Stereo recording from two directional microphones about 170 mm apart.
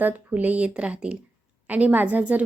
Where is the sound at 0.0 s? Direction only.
10° right (ahead or behind).